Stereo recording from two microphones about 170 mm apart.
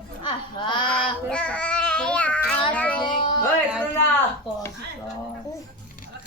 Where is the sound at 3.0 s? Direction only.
25° left (ahead or behind).